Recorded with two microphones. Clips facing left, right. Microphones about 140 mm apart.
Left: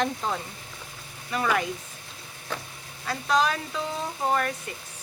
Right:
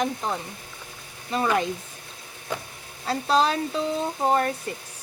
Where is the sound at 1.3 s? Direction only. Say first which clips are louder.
Right 3 dB; 25° right (ahead or behind).